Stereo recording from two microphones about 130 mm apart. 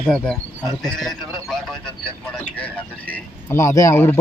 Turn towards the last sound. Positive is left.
turn(degrees=15)  # may be behind; listen again after turning